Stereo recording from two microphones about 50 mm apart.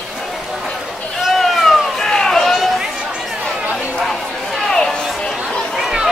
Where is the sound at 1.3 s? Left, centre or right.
Centre.